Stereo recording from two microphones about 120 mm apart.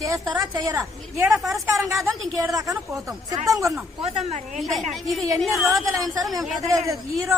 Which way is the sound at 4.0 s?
65° right (ahead or behind).